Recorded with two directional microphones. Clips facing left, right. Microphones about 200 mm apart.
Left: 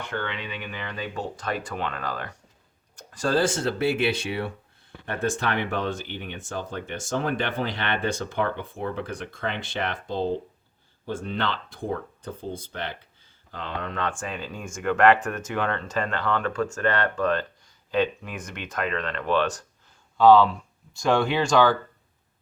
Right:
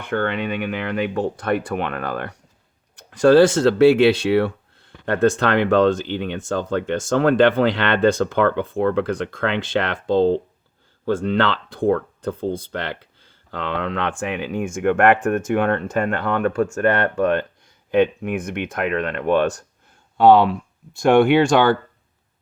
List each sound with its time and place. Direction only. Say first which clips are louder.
0.0 s speech: right 9 dB; 55° right (ahead or behind); by 14.1 s 85° right
14.2 s speech: right 9 dB; 70° right (ahead or behind); by 19.6 s 50° right (ahead or behind)
20.1 s speech: right 3 dB; 60° right (ahead or behind)